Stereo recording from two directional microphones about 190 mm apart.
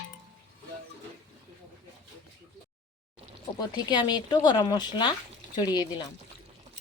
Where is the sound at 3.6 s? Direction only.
20° left (ahead or behind).